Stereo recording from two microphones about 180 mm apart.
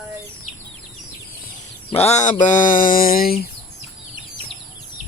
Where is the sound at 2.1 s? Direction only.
40° left (ahead or behind).